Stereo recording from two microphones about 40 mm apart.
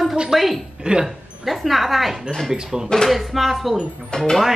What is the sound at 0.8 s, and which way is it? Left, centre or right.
Speech, centre.